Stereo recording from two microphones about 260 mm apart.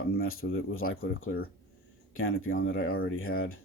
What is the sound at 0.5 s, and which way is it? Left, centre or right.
Speech, left.